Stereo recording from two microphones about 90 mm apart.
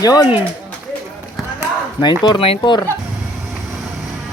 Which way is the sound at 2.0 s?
55° left (ahead or behind).